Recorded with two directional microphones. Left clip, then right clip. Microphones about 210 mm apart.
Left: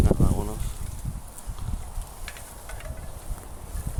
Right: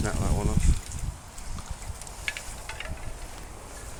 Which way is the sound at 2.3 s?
55° left (ahead or behind).